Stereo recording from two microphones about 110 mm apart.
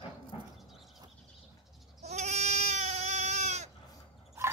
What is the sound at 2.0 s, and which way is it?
Goat, 85° right.